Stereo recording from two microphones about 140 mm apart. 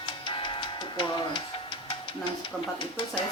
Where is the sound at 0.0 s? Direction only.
40° left (ahead or behind).